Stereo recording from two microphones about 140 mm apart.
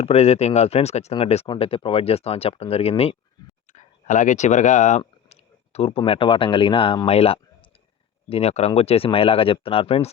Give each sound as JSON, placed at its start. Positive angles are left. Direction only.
{"t": 0.0, "sound": "speech", "side_deg": 50}
{"t": 3.7, "sound": "a sound", "side_deg": 60}
{"t": 6.1, "sound": "speech", "side_deg": 40}